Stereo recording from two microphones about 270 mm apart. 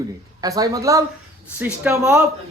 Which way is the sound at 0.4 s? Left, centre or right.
Centre.